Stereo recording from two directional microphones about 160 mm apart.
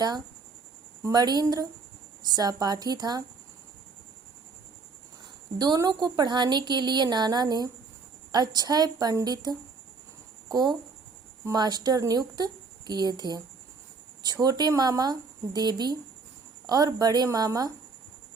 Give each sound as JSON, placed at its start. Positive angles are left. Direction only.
{"t": 1.0, "sound": "speech", "side_deg": -25}
{"t": 5.5, "sound": "speech", "side_deg": -25}
{"t": 11.4, "sound": "speech", "side_deg": -25}